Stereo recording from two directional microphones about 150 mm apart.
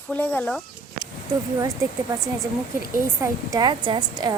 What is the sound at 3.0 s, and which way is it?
A woman's voice, 20° right (ahead or behind).